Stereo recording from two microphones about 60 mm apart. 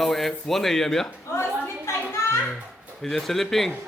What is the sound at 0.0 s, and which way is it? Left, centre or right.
Speech, centre.